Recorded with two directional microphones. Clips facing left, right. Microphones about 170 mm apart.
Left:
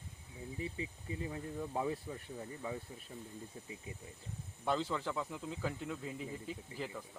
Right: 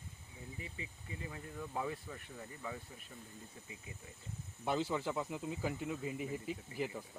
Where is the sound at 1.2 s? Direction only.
25° left (ahead or behind).